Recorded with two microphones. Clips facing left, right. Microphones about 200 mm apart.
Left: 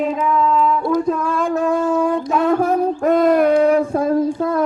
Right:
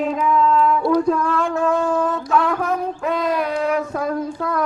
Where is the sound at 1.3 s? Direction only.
15° left (ahead or behind).